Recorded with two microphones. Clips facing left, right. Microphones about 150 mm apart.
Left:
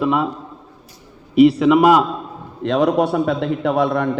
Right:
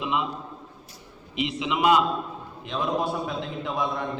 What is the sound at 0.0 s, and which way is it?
Speech, 50° left (ahead or behind).